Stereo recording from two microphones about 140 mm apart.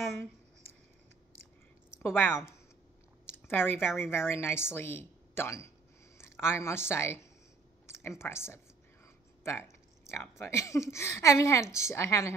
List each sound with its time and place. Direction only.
2.0 s a woman's voice: 15° left (ahead or behind)
3.3 s a sound: 15° left (ahead or behind)
3.9 s a woman's voice: 15° left (ahead or behind)